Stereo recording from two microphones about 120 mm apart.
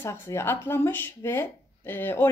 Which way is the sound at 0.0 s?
20° left (ahead or behind).